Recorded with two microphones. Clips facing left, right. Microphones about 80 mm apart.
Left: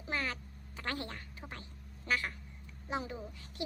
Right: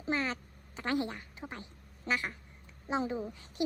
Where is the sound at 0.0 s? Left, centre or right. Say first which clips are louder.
Right 4 dB; right.